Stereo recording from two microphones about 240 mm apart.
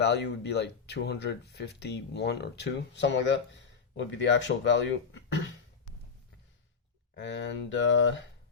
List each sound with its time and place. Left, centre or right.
0.0 s speech: left
7.2 s speech: left